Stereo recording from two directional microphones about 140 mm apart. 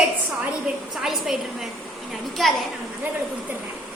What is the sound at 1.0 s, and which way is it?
A woman's voice, centre (ahead or behind).